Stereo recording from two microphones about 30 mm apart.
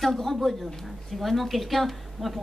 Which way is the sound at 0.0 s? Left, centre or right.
Centre.